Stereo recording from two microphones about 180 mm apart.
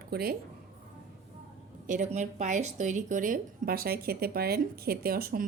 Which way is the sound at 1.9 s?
45° right (ahead or behind).